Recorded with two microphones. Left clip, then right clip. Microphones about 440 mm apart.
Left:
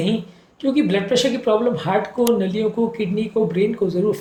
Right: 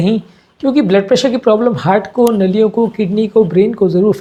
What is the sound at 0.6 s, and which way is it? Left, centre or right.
A woman's voice, right.